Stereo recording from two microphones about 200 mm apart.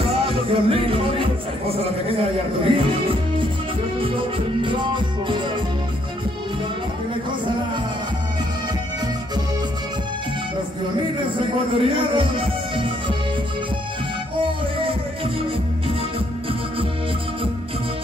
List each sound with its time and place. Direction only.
0.3 s speech: 30° right (ahead or behind)
4.6 s speech: 25° right (ahead or behind)
11.3 s speech: 25° right (ahead or behind)
14.4 s speech: 25° right (ahead or behind)